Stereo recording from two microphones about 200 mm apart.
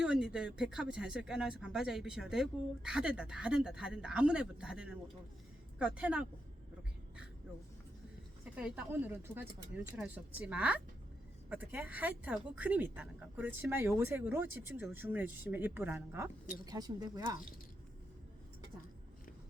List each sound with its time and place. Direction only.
0.0 s speech: 5° right (ahead or behind)
8.5 s speech: 5° right (ahead or behind)